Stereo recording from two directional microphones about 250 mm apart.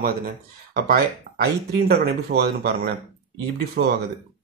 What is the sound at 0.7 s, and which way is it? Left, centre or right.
Speech, right.